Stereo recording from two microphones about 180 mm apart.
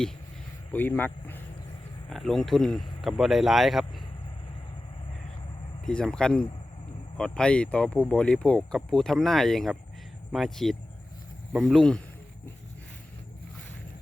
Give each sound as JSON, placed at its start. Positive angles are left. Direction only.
{"t": 0.7, "sound": "speech", "side_deg": 10}
{"t": 5.8, "sound": "speech", "side_deg": 5}